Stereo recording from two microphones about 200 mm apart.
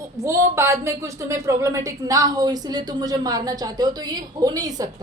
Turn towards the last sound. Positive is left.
turn(degrees=-20)  # may be behind; listen again after turning